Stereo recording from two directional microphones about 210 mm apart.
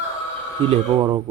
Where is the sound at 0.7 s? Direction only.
20° right (ahead or behind).